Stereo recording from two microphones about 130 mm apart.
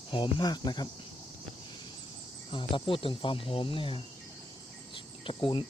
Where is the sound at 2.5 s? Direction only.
40° left (ahead or behind).